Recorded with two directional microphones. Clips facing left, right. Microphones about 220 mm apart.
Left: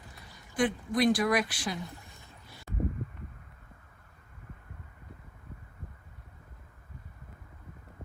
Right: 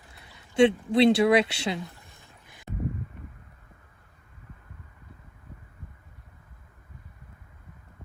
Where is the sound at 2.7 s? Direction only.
25° right (ahead or behind).